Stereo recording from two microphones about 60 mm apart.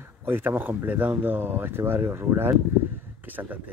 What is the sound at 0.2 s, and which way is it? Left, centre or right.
Speech, right.